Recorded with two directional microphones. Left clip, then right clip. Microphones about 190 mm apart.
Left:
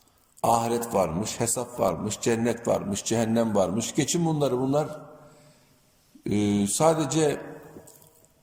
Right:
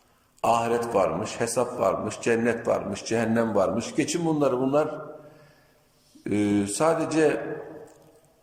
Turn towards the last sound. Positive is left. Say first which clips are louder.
# right 2 dB
turn(degrees=25)  # may be behind; listen again after turning